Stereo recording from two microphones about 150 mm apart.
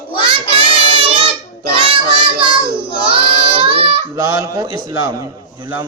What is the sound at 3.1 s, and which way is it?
Child singing, 35° right (ahead or behind).